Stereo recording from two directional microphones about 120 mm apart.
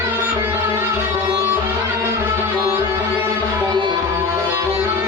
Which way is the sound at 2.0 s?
20° right (ahead or behind).